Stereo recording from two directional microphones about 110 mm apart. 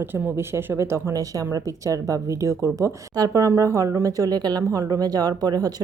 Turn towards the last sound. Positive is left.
turn(degrees=-35)  # may be behind; listen again after turning